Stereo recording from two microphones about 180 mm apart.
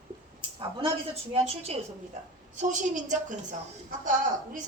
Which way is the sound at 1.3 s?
35° right (ahead or behind).